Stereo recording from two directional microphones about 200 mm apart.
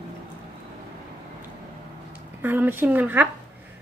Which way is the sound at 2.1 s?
10° right (ahead or behind).